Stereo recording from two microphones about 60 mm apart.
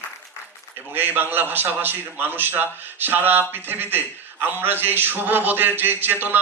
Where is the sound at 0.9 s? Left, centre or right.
Right.